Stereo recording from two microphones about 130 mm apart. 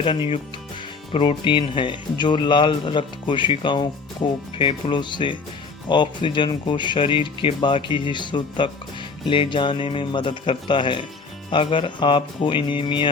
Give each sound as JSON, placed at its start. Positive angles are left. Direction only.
{"t": 0.0, "sound": "speech", "side_deg": 40}